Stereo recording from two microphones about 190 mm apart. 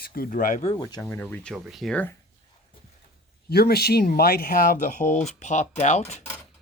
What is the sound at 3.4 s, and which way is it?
Speech, 55° left (ahead or behind).